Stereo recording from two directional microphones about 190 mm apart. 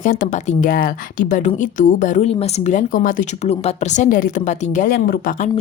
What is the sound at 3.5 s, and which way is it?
A woman's voice, 35° left (ahead or behind).